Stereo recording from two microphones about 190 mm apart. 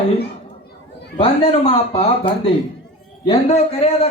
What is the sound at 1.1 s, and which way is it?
Speech, 35° left (ahead or behind).